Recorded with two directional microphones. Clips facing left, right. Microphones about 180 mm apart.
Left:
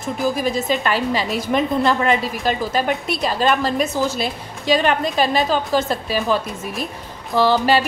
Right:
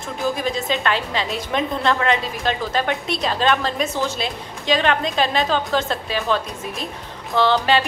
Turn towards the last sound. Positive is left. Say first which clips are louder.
# left 2 dB
turn(degrees=5)  # may be behind; listen again after turning